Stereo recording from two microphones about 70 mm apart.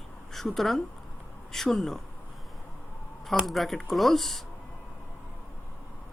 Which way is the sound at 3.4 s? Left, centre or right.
Centre.